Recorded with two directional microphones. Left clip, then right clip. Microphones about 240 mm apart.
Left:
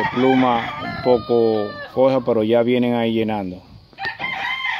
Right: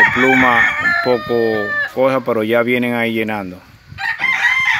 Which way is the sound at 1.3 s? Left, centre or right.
Centre.